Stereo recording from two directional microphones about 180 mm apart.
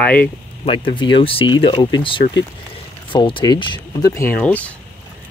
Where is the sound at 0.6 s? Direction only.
30° left (ahead or behind); by 4.7 s 10° left (ahead or behind).